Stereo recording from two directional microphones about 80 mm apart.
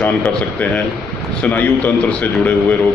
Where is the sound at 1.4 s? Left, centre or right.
Centre.